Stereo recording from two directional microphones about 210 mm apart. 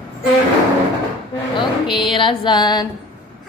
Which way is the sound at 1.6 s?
20° left (ahead or behind).